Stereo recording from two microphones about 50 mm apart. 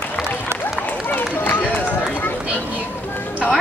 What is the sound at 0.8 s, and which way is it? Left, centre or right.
Run, left.